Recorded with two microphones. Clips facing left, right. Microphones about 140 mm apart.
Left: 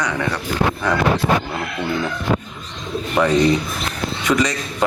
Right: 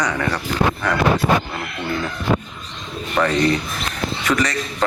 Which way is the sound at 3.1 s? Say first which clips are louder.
Left 2 dB; 10° left (ahead or behind).